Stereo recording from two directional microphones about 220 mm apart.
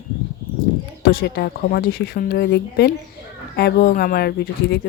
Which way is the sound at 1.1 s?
45° left (ahead or behind).